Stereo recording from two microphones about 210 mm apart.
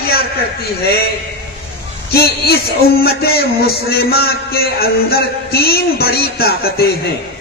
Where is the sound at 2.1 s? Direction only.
45° left (ahead or behind).